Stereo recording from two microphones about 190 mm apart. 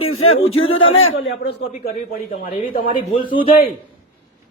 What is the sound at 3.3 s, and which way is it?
Speech, 25° left (ahead or behind).